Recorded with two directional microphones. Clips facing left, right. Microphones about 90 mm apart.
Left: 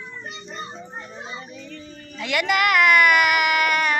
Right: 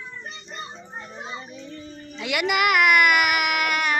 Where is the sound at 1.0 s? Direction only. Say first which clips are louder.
Even; 15° right (ahead or behind).